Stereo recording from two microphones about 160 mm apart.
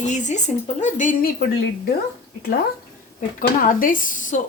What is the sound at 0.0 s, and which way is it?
A woman's voice, 50° left (ahead or behind).